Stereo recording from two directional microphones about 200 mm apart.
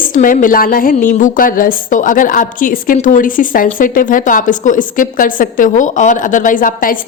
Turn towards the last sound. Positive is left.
turn(degrees=45)  # may be behind; listen again after turning